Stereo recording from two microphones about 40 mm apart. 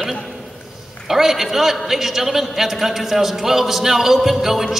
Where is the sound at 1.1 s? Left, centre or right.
Centre.